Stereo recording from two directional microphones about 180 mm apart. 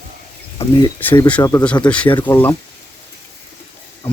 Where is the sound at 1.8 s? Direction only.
5° left (ahead or behind).